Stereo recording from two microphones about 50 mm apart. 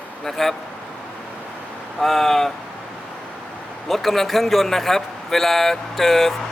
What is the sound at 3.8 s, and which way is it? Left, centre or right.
A man's voice, centre.